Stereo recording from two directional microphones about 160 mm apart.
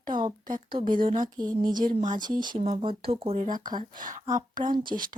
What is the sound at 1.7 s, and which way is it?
Speech, 55° right (ahead or behind).